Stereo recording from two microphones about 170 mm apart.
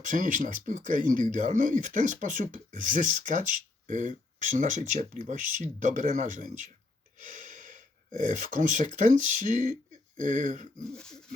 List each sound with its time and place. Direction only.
0.0 s speech: 50° right (ahead or behind)
10.9 s pig: 5° left (ahead or behind)